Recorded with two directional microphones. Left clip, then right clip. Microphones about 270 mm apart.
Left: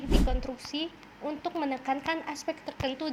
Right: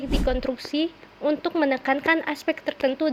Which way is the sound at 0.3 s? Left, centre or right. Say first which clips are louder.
Right 9 dB; right.